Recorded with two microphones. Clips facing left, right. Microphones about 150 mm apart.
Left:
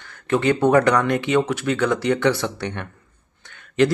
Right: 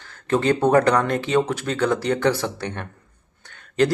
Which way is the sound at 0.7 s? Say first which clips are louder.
Left 1 dB; 35° right (ahead or behind).